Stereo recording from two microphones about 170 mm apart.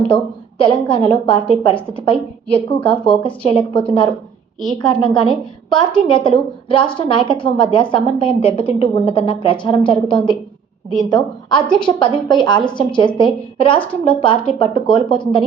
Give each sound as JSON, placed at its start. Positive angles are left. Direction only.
{"t": 0.6, "sound": "a woman's voice", "side_deg": 30}